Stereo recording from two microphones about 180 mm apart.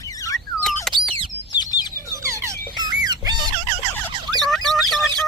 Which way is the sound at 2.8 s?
20° right (ahead or behind).